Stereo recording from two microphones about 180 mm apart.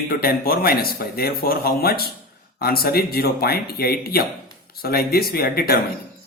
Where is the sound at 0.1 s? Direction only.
55° left (ahead or behind).